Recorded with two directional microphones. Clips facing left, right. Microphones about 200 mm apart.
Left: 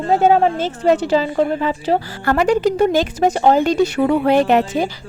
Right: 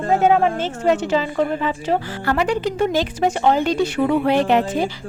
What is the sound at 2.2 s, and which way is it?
A woman's voice, 45° left (ahead or behind).